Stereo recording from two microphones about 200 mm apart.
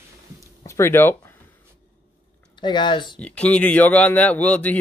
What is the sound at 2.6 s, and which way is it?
Speech, 25° left (ahead or behind).